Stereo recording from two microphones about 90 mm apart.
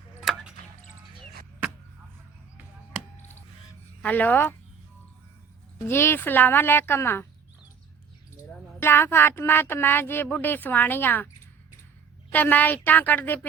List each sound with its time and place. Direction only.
0.2 s chop: centre (ahead or behind)
4.0 s speech: 20° left (ahead or behind)
5.9 s speech: 25° left (ahead or behind)
8.8 s speech: 25° left (ahead or behind)
12.3 s speech: 20° left (ahead or behind)